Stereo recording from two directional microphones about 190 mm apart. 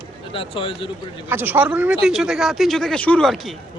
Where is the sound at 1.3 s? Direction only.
10° right (ahead or behind).